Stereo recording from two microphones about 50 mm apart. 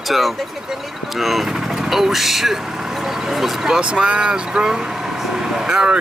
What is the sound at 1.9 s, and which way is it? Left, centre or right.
Speech, centre.